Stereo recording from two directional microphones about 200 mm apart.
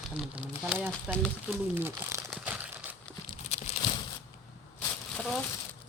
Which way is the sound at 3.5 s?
30° left (ahead or behind).